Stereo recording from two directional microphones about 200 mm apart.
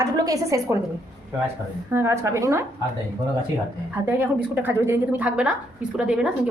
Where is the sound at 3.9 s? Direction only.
10° right (ahead or behind).